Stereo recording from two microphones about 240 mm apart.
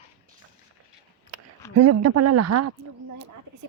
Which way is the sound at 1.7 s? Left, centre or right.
Right.